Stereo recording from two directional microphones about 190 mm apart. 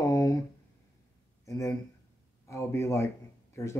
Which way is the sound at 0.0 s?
15° left (ahead or behind).